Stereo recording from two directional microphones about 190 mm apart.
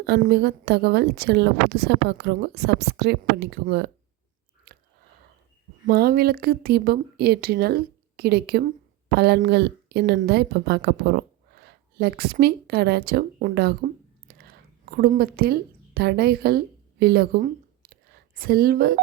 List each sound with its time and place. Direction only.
0.0 s a woman's voice: 60° right (ahead or behind)
4.7 s chewing: 50° right (ahead or behind)
5.8 s a woman's voice: 55° right (ahead or behind)
14.3 s whispering: 50° right (ahead or behind)
16.0 s a woman's voice: 55° right (ahead or behind)